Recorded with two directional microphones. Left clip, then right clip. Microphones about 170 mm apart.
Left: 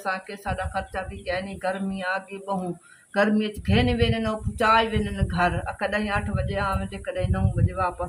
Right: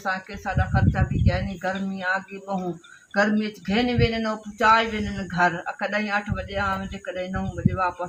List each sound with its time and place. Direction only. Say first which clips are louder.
0.0 s speech: right 1 dB; 15° left (ahead or behind)